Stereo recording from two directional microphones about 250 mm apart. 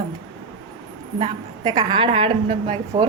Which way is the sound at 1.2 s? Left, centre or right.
Centre.